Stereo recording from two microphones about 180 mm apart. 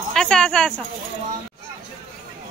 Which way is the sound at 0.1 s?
5° left (ahead or behind).